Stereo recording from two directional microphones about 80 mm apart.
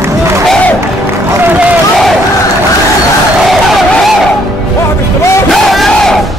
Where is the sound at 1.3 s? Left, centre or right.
Right.